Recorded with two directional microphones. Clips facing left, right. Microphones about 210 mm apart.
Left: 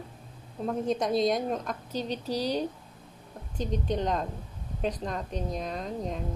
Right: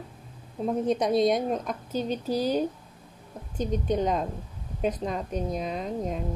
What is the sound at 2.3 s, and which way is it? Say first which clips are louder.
Speech: right 3 dB; 45° right (ahead or behind).